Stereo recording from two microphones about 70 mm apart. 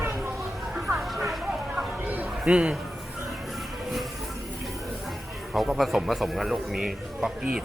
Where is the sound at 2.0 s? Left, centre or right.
Right.